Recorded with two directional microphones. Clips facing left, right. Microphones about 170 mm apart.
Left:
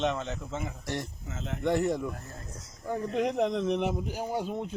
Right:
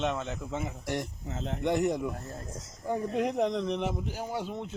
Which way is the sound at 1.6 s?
15° right (ahead or behind).